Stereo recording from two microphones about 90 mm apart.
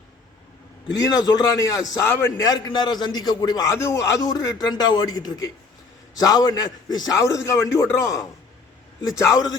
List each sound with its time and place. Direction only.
1.0 s a man's voice: 45° left (ahead or behind)
2.4 s a man's voice: 50° left (ahead or behind)
4.6 s a man's voice: 50° left (ahead or behind)
7.2 s a man's voice: 35° left (ahead or behind)